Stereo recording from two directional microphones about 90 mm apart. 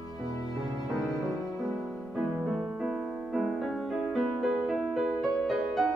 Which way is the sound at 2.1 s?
5° right (ahead or behind).